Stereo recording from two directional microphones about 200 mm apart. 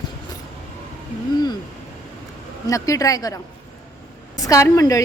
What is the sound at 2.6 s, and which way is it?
A woman's voice, 15° left (ahead or behind).